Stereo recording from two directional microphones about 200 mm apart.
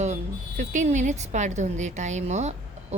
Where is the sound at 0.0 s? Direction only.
35° right (ahead or behind).